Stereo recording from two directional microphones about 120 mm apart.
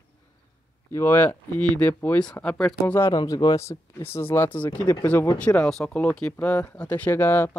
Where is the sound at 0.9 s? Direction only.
20° left (ahead or behind).